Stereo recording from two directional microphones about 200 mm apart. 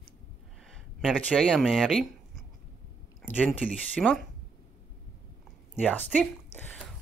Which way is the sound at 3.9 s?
5° left (ahead or behind).